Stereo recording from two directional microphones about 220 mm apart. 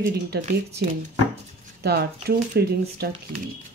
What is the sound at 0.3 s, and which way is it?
Speech, 45° right (ahead or behind).